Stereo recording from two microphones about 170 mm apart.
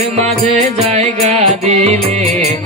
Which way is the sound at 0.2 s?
40° right (ahead or behind).